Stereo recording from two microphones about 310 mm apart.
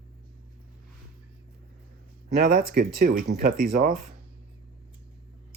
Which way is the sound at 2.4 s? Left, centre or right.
Right.